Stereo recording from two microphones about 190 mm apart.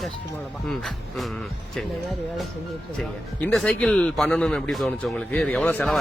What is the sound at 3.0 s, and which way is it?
A man's voice, 5° left (ahead or behind).